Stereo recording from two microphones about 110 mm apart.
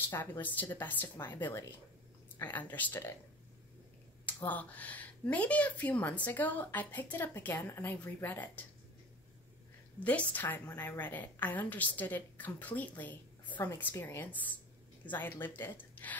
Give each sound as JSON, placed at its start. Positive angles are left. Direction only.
{"t": 0.1, "sound": "a woman's voice", "side_deg": 20}
{"t": 4.3, "sound": "speech", "side_deg": 15}
{"t": 10.0, "sound": "speech", "side_deg": 15}